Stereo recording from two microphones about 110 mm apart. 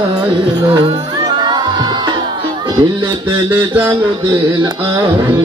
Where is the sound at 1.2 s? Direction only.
40° right (ahead or behind).